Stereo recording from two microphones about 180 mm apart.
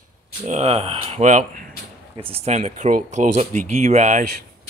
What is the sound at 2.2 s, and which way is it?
Speech, 30° right (ahead or behind).